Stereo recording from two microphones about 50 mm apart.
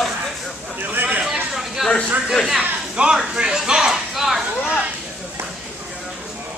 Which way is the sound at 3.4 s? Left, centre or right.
Centre.